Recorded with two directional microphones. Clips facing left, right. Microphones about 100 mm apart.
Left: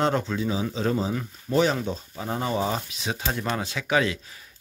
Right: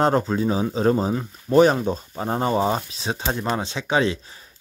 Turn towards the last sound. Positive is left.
turn(degrees=-30)  # may be behind; listen again after turning